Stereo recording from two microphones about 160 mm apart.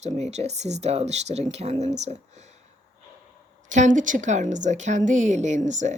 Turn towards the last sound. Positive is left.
turn(degrees=-50)  # may be behind; listen again after turning